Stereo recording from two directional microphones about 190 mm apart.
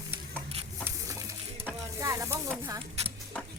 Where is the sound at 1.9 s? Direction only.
15° right (ahead or behind).